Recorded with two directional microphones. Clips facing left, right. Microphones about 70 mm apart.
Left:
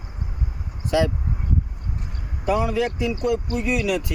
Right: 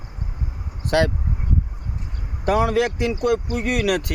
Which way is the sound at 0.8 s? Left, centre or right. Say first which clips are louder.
Right 2 dB; right.